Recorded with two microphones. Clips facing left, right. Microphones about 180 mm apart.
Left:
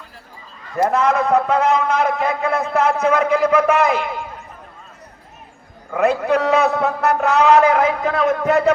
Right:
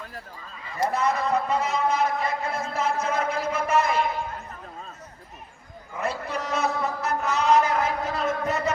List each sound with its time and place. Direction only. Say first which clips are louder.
0.9 s a man's voice: left 7 dB; 90° left
1.1 s a man's voice: left 8 dB; 60° left (ahead or behind)
5.9 s a man's voice: left 13 dB; 70° left (ahead or behind)